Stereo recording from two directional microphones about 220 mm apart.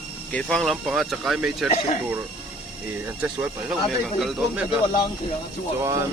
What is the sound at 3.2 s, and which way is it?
Speech, 5° right (ahead or behind).